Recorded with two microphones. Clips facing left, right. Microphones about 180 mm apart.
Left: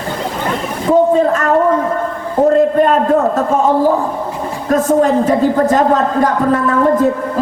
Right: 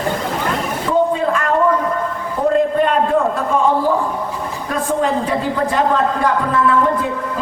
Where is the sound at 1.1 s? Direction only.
45° left (ahead or behind).